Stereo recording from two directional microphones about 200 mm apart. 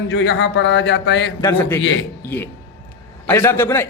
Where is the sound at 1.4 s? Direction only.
10° left (ahead or behind).